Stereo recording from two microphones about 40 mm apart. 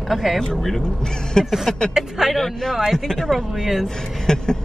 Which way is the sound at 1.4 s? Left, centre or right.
Centre.